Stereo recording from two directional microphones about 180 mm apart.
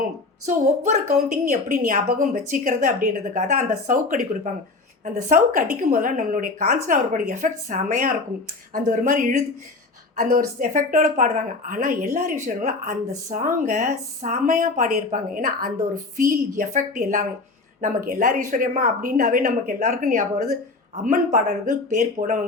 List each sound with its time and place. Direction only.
0.9 s a woman's voice: 40° right (ahead or behind)